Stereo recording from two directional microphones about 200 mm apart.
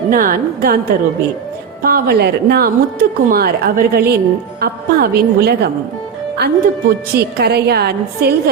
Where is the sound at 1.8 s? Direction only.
50° right (ahead or behind).